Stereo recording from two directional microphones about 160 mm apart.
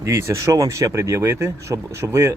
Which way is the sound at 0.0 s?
20° right (ahead or behind).